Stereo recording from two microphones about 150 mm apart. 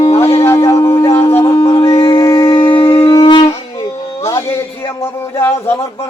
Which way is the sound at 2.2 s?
20° left (ahead or behind).